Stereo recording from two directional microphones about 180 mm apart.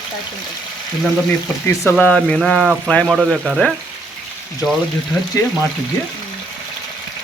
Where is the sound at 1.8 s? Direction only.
5° left (ahead or behind).